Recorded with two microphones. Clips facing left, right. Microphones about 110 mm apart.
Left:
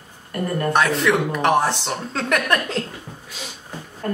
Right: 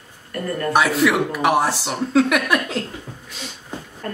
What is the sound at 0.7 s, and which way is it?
Speech, 5° right (ahead or behind).